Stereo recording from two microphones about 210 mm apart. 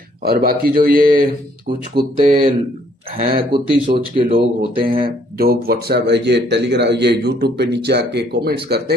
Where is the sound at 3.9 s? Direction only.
25° right (ahead or behind).